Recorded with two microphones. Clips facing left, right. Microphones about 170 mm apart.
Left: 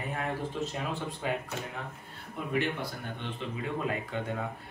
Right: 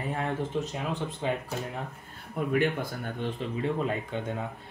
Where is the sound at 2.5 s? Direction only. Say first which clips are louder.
Right 4 dB; 50° right (ahead or behind).